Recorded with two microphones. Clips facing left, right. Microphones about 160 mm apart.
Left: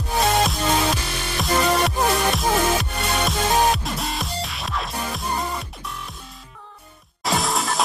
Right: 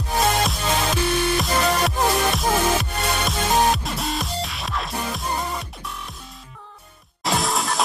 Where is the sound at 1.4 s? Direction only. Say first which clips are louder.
Left 1 dB; centre (ahead or behind).